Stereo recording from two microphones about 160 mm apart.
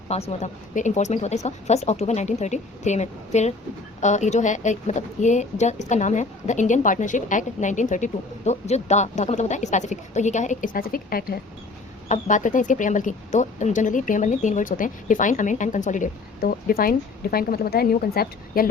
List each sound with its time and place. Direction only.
0.1 s speech: 40° left (ahead or behind); by 11.3 s 65° left (ahead or behind)
12.0 s a woman's voice: 50° left (ahead or behind); by 18.7 s 70° left (ahead or behind)